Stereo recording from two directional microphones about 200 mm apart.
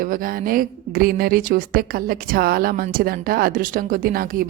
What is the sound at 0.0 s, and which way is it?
A woman's voice, 45° right (ahead or behind).